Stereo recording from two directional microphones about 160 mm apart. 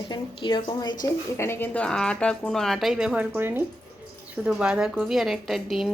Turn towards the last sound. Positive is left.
turn(degrees=0)  # may be behind; listen again after turning